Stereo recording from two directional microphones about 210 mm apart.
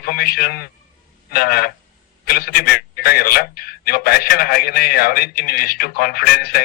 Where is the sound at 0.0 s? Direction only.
45° left (ahead or behind).